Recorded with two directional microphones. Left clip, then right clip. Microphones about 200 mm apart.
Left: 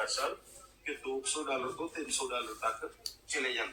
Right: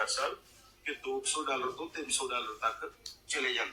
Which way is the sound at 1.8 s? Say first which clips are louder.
Left 2 dB; 5° right (ahead or behind).